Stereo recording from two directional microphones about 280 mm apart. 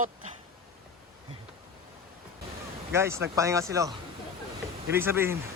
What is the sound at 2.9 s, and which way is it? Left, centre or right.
Speech, centre.